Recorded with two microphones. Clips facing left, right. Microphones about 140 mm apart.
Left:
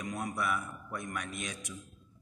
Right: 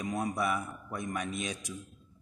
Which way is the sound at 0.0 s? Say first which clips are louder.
Right 4 dB; 30° right (ahead or behind).